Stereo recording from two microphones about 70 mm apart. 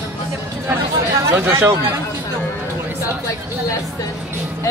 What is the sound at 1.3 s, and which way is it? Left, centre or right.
Speech, right.